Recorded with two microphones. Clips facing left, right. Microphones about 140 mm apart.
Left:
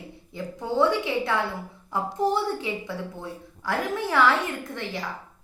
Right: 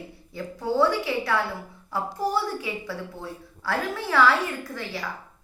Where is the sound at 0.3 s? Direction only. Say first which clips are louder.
Right 1 dB; 20° left (ahead or behind).